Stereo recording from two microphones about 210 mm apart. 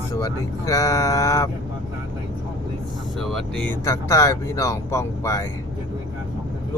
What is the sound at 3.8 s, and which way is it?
Speech, 15° left (ahead or behind).